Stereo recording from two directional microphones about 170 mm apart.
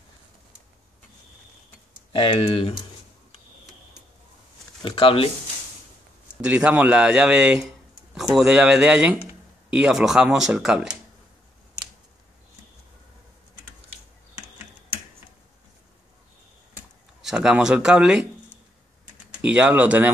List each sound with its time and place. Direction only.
2.1 s speech: 30° left (ahead or behind)
4.8 s speech: 30° left (ahead or behind)
6.4 s speech: 5° right (ahead or behind)
16.7 s a sound: 5° right (ahead or behind)
19.4 s speech: 5° right (ahead or behind)